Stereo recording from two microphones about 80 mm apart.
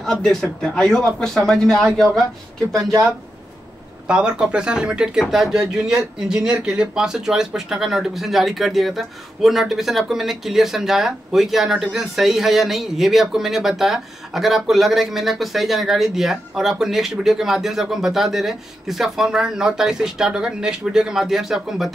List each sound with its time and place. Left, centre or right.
0.0 s speech: centre
2.7 s speech: right
4.1 s speech: centre